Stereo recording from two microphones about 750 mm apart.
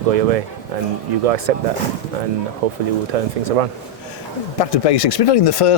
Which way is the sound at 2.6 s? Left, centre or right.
Right.